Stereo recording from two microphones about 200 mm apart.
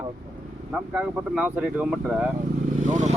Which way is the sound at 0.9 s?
5° right (ahead or behind).